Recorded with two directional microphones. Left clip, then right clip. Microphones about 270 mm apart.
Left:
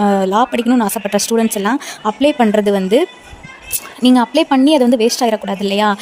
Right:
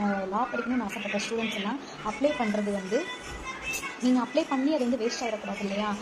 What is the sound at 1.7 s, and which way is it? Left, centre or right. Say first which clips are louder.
Speech: left 15 dB; left.